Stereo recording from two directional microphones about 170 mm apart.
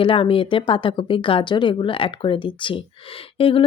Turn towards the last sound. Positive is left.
turn(degrees=30)  # may be behind; listen again after turning